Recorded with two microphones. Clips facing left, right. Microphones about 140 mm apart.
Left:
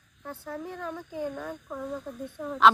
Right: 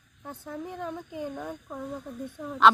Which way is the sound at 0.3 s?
15° right (ahead or behind).